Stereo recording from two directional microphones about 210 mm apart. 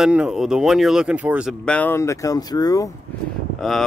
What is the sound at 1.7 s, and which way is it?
Speech, 10° left (ahead or behind).